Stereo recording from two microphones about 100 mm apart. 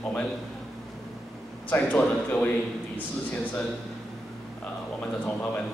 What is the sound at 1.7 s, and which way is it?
Speech, 15° left (ahead or behind).